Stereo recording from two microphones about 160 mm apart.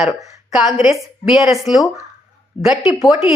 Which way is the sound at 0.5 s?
Centre (ahead or behind).